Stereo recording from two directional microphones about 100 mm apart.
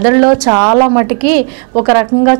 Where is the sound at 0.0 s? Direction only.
15° right (ahead or behind).